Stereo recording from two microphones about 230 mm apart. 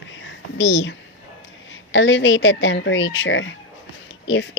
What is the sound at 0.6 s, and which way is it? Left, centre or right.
Speech, left.